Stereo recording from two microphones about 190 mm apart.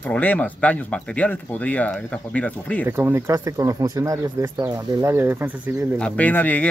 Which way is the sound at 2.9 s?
15° right (ahead or behind).